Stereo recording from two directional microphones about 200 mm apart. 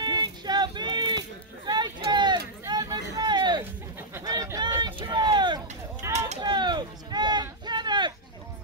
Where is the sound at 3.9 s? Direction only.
15° right (ahead or behind).